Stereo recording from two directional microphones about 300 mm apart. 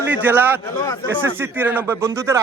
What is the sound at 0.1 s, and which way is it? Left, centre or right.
Speech, centre.